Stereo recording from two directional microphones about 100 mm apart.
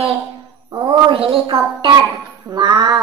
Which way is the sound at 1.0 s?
65° right (ahead or behind).